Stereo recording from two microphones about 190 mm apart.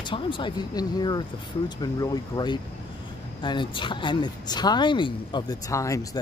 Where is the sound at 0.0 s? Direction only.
25° left (ahead or behind).